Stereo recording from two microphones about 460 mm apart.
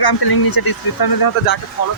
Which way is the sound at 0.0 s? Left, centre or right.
Left.